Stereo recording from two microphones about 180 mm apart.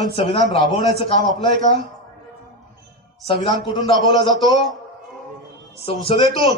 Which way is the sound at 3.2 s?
25° left (ahead or behind).